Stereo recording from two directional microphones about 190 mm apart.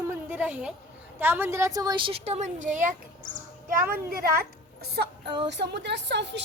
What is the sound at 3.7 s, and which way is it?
A woman's voice, 50° right (ahead or behind).